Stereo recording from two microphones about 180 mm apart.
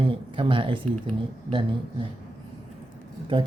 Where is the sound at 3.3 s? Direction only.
30° right (ahead or behind).